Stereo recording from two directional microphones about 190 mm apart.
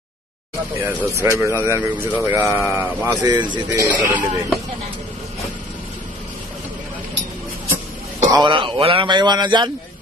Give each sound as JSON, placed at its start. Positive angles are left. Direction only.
{"t": 0.7, "sound": "speech", "side_deg": -10}
{"t": 8.3, "sound": "a man's voice", "side_deg": -25}